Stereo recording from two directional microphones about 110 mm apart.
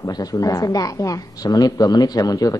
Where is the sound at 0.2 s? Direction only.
35° left (ahead or behind).